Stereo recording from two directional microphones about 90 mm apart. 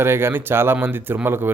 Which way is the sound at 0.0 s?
25° right (ahead or behind).